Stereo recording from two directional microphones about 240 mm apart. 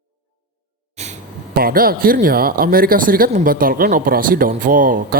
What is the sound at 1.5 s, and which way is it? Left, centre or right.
Speech, right.